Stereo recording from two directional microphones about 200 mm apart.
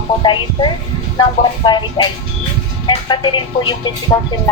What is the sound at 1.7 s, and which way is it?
Speech, 20° left (ahead or behind).